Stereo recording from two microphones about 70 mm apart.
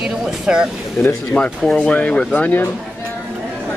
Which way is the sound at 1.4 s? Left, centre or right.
Left.